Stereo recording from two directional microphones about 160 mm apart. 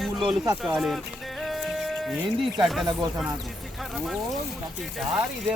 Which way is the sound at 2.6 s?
Centre (ahead or behind).